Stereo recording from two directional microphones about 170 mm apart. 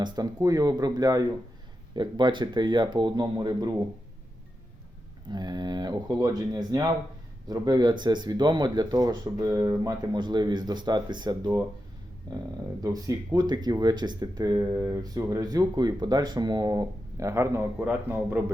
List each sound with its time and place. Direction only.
0.3 s speech: 20° right (ahead or behind)
5.3 s speech: 25° right (ahead or behind)
12.8 s speech: 20° right (ahead or behind)